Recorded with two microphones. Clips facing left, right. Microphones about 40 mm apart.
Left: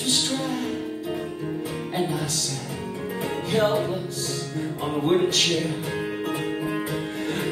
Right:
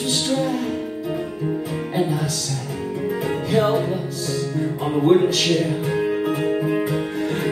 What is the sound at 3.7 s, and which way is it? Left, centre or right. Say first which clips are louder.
Music: right 3 dB; centre.